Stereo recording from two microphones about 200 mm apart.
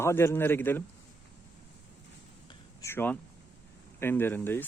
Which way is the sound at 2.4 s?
15° left (ahead or behind).